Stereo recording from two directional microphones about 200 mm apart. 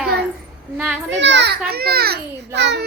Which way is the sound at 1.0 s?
60° right (ahead or behind).